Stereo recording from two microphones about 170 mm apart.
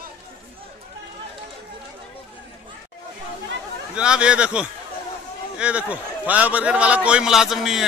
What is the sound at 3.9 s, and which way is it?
A man's voice, 5° right (ahead or behind).